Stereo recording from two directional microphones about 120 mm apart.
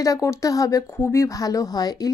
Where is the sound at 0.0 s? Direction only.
25° left (ahead or behind).